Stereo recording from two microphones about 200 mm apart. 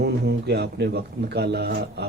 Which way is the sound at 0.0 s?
55° right (ahead or behind).